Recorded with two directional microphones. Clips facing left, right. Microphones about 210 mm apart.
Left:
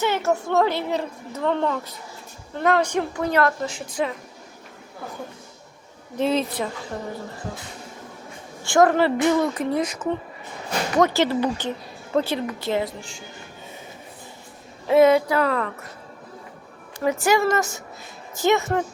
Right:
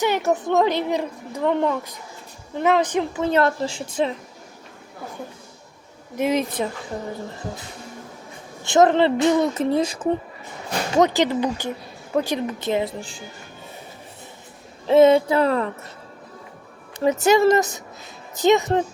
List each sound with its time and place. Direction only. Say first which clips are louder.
0.0 s a woman's voice: right 2 dB; 15° right (ahead or behind)
6.1 s a woman's voice: right 1 dB; 15° right (ahead or behind)
8.6 s speech: right 1 dB; 20° right (ahead or behind)
10.9 s a woman's voice: right 1 dB; 20° right (ahead or behind)
14.8 s speech: right 2 dB; 25° right (ahead or behind)
17.0 s speech: right 4 dB; 20° right (ahead or behind)